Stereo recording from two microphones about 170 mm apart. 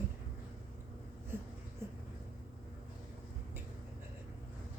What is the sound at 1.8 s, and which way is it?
Vehicle, 15° right (ahead or behind).